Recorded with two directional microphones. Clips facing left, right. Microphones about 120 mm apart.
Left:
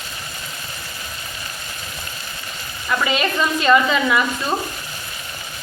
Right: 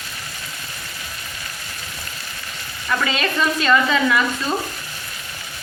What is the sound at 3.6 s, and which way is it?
Speech, 15° left (ahead or behind).